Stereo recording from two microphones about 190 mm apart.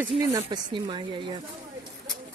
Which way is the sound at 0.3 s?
20° right (ahead or behind).